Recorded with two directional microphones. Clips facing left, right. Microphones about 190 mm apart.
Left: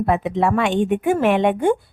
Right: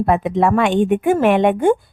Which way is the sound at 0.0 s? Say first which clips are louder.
Right 3 dB; 50° right (ahead or behind).